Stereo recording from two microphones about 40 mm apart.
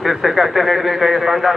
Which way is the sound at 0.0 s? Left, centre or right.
Centre.